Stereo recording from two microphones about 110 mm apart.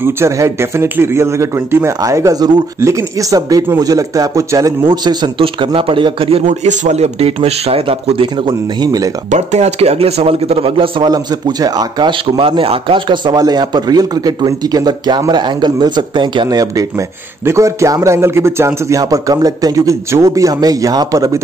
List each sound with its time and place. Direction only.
0.0 s a man's voice: 25° right (ahead or behind)
4.8 s a man's voice: 45° right (ahead or behind)
6.4 s a man's voice: 90° right; by 8.5 s 55° right (ahead or behind)
8.8 s a man's voice: 35° right (ahead or behind)
9.3 s a man's voice: 85° right; by 11.1 s 55° right (ahead or behind)
11.1 s a man's voice: 35° right (ahead or behind)